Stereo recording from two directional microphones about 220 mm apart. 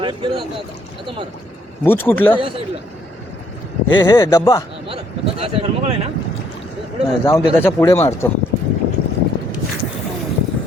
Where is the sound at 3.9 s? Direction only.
20° left (ahead or behind).